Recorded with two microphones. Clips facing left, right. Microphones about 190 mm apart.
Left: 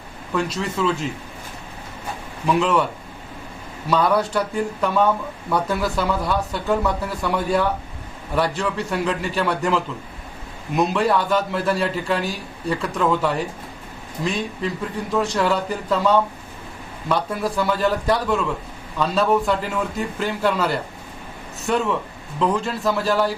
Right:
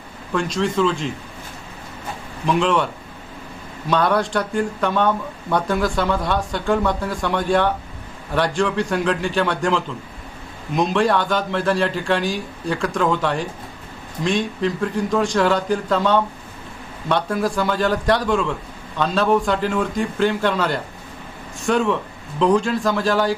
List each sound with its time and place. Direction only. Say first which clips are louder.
0.3 s speech: right 3 dB; 5° left (ahead or behind)
2.5 s speech: even; 5° left (ahead or behind)
3.8 s speech: even; 5° left (ahead or behind)